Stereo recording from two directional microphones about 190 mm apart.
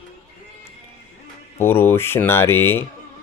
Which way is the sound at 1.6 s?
10° left (ahead or behind).